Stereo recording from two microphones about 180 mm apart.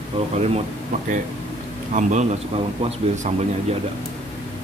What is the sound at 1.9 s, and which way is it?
A man's voice, 40° right (ahead or behind).